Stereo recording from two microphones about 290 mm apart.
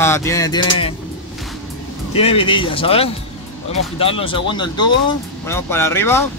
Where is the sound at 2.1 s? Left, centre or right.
Centre.